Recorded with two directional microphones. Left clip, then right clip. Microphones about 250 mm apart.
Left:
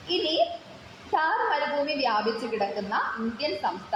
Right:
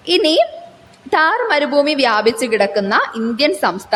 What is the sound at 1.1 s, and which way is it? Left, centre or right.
A woman's voice, right.